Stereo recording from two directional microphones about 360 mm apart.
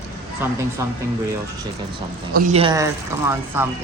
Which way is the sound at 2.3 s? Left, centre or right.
Centre.